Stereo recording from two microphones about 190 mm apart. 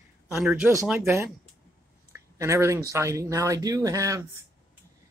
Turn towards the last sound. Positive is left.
turn(degrees=-15)  # may be behind; listen again after turning